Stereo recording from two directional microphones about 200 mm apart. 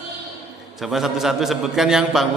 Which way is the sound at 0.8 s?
Centre (ahead or behind).